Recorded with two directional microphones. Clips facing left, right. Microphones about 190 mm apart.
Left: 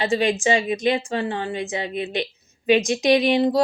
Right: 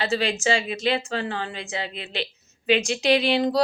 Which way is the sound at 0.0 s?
15° left (ahead or behind).